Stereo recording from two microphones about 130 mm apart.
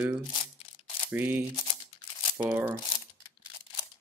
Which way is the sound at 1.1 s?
15° right (ahead or behind).